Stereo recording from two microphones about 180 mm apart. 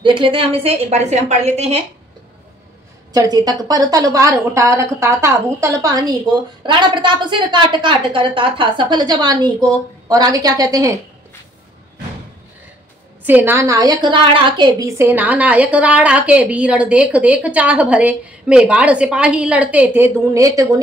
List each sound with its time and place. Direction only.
0.0 s a woman's voice: 25° right (ahead or behind)
3.1 s a woman's voice: 20° right (ahead or behind)
13.2 s a woman's voice: 10° right (ahead or behind)